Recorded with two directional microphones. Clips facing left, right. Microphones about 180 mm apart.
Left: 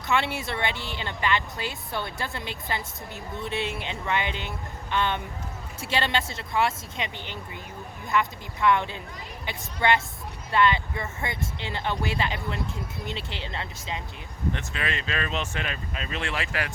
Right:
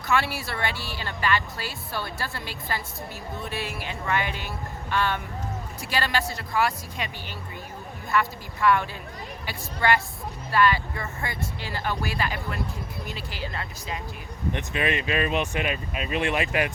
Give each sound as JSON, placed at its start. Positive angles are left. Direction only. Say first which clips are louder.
{"t": 0.1, "sound": "speech", "louder": "even", "side_deg": 20}
{"t": 14.5, "sound": "speech", "louder": "right 9 dB", "side_deg": -20}